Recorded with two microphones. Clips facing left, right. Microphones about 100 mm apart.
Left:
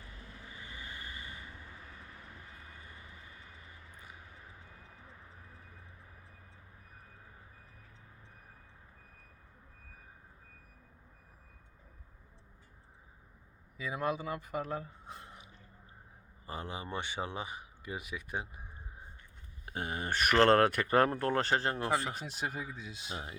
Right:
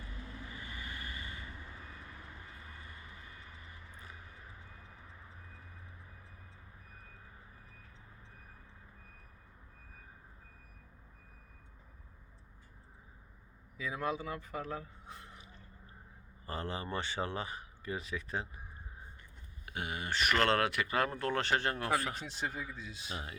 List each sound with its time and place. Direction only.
0.7 s vehicle: 20° left (ahead or behind)
13.7 s speech: 10° left (ahead or behind)
14.8 s a sound: 20° left (ahead or behind)
16.5 s speech: 15° left (ahead or behind)
19.6 s speech: 35° left (ahead or behind)
22.1 s speech: 10° left (ahead or behind)
22.6 s speech: 20° left (ahead or behind)